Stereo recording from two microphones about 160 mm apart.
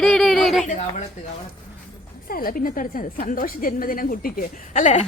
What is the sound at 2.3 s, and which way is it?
A woman's voice, 65° left (ahead or behind).